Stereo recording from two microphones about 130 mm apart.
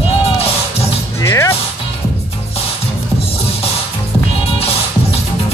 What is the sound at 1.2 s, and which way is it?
Music, 25° left (ahead or behind).